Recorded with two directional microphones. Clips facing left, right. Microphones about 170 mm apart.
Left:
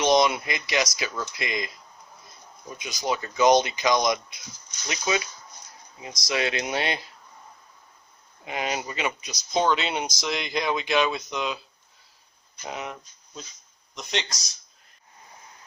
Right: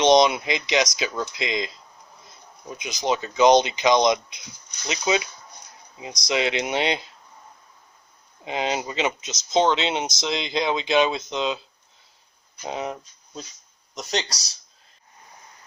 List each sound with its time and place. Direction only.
0.0 s speech: 20° right (ahead or behind)
8.4 s speech: 25° right (ahead or behind)
12.6 s speech: 30° right (ahead or behind)